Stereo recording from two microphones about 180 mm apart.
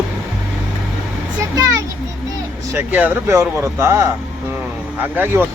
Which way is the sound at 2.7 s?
10° right (ahead or behind).